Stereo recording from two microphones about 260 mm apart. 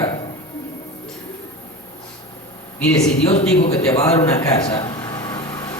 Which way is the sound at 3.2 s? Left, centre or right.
Left.